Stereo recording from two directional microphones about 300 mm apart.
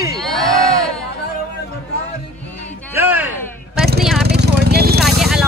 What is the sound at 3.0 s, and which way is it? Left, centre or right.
Music, centre.